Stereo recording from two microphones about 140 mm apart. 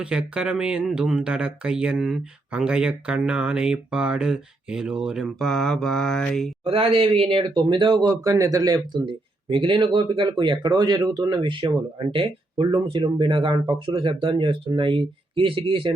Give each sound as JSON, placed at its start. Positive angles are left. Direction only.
{"t": 0.0, "sound": "speech", "side_deg": -5}
{"t": 6.7, "sound": "speech", "side_deg": -40}
{"t": 9.5, "sound": "speech", "side_deg": -35}